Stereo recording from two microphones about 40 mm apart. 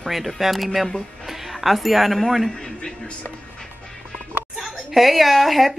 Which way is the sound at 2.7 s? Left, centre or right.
Left.